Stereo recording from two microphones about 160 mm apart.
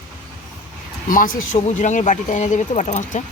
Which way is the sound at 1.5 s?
45° left (ahead or behind).